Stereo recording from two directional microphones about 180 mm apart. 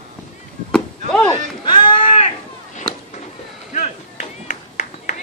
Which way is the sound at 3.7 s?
40° left (ahead or behind).